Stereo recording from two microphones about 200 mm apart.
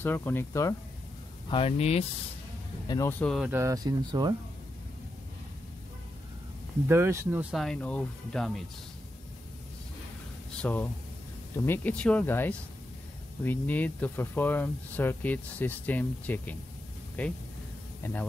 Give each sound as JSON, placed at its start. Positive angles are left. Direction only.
{"t": 0.0, "sound": "speech", "side_deg": 10}
{"t": 1.5, "sound": "speech", "side_deg": 30}
{"t": 2.9, "sound": "speech", "side_deg": 15}
{"t": 3.5, "sound": "speech", "side_deg": -15}
{"t": 6.9, "sound": "speech", "side_deg": -15}
{"t": 7.5, "sound": "speech", "side_deg": 5}
{"t": 10.6, "sound": "speech", "side_deg": 10}